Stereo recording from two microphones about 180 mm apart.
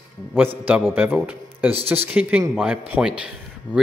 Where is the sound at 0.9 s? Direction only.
10° right (ahead or behind).